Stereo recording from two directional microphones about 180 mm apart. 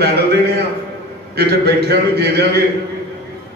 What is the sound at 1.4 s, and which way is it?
A man's voice, 60° right (ahead or behind).